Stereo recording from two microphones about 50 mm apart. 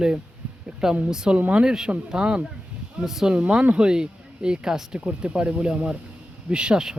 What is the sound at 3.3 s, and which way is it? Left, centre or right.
Speech, right.